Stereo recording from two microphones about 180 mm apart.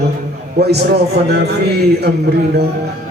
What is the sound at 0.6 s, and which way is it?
Speech, 65° right (ahead or behind).